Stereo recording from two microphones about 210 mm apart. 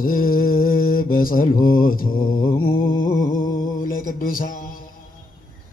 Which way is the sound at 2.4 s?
45° left (ahead or behind).